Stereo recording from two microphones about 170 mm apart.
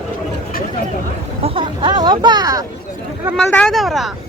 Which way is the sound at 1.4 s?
35° right (ahead or behind).